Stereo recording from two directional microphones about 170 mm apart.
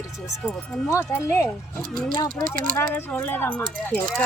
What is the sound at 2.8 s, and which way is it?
Speech, 15° left (ahead or behind).